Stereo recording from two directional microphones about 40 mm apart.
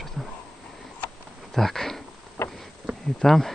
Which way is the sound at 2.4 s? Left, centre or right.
Left.